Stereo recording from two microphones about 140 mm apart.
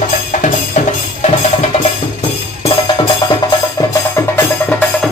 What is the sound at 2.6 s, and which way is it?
Music, 40° left (ahead or behind).